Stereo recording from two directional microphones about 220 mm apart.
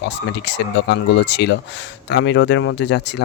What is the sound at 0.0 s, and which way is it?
Speech, 50° left (ahead or behind).